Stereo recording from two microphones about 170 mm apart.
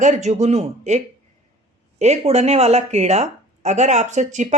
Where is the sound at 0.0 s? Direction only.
45° right (ahead or behind).